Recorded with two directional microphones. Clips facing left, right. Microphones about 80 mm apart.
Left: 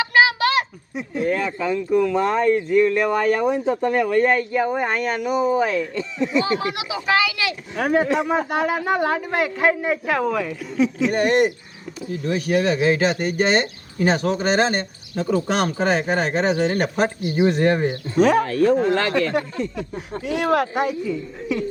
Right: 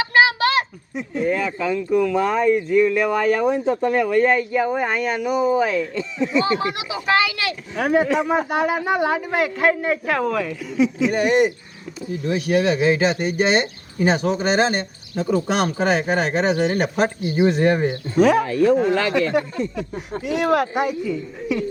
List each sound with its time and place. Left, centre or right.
0.1 s a sound: right
0.9 s speech: centre
3.5 s speech: centre
4.3 s speech: centre
5.7 s speech: centre
6.4 s speech: right
7.8 s speech: centre
8.3 s speech: centre
10.8 s speech: centre
12.8 s speech: centre
17.6 s speech: centre